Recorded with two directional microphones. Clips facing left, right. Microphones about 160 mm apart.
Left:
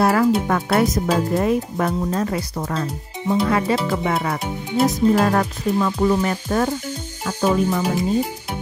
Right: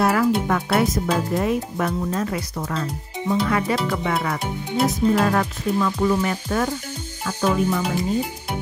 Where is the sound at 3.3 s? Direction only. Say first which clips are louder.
Left 2 dB; 30° left (ahead or behind).